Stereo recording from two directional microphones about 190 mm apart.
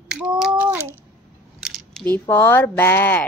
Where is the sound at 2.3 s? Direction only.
10° left (ahead or behind).